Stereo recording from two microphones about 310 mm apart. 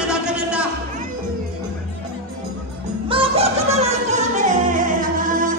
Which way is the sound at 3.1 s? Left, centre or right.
Centre.